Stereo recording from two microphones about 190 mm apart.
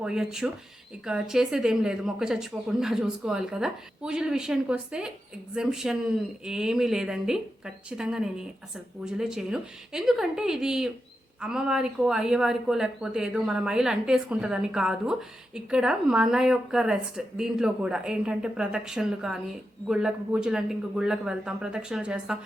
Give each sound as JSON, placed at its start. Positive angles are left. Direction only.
{"t": 0.0, "sound": "speech", "side_deg": -5}